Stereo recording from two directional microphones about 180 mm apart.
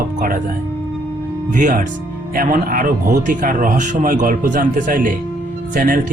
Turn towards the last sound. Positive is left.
turn(degrees=-50)  # may be behind; listen again after turning